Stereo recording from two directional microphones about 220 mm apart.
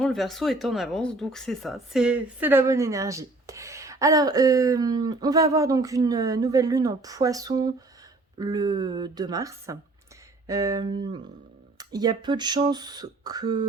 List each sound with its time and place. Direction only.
0.0 s speech: centre (ahead or behind); by 13.7 s 20° right (ahead or behind)